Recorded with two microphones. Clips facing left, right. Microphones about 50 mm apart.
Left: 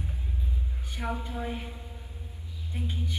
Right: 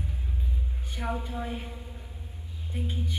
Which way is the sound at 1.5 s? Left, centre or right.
Centre.